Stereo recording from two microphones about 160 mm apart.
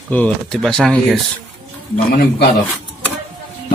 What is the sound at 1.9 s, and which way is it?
Speech, 70° left (ahead or behind).